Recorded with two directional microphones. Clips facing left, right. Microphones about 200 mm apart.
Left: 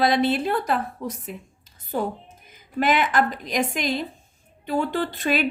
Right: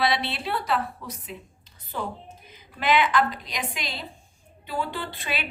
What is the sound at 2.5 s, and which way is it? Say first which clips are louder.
A woman's voice: left 3 dB; 50° left (ahead or behind).